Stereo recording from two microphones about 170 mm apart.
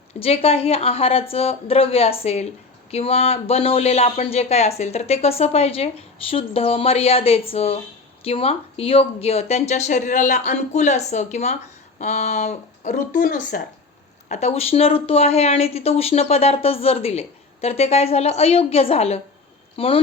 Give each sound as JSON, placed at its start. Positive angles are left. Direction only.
{"t": 0.1, "sound": "speech", "side_deg": 35}
{"t": 14.3, "sound": "speech", "side_deg": 40}